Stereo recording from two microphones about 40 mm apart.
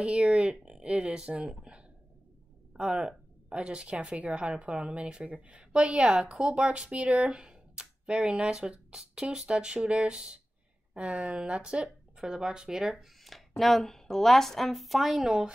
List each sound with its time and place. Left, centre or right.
0.0 s speech: right
1.6 s a sound: right
2.9 s speech: right
12.8 s a woman's voice: centre
15.2 s speech: centre